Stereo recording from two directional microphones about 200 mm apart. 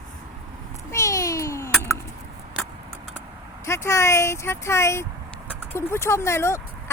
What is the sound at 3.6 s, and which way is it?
Speech, 15° left (ahead or behind).